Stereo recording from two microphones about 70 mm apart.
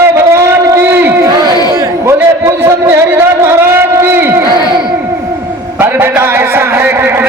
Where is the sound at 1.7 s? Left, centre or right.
Right.